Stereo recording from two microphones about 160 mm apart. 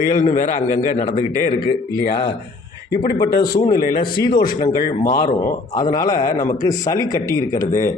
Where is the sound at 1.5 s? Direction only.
30° left (ahead or behind).